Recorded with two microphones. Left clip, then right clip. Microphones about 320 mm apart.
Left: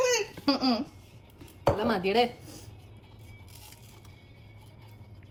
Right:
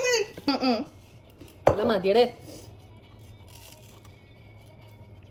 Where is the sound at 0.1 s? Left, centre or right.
Centre.